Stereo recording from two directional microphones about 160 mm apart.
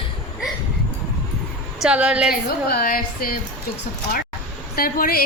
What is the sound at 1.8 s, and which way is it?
Speech, 5° right (ahead or behind).